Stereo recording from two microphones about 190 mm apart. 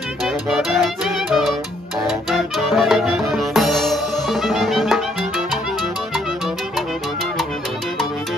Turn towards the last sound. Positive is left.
turn(degrees=0)  # may be behind; listen again after turning